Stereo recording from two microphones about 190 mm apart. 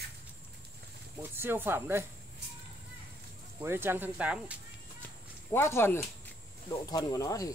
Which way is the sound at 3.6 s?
10° right (ahead or behind).